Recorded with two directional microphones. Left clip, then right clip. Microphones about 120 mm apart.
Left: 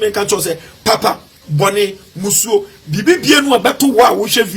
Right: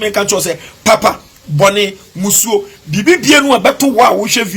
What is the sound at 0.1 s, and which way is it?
Speech, 20° right (ahead or behind).